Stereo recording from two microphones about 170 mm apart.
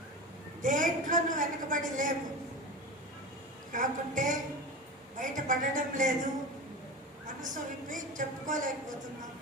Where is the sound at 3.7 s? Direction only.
50° right (ahead or behind).